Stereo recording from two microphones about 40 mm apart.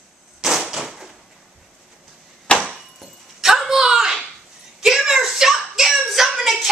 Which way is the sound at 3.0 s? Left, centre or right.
Centre.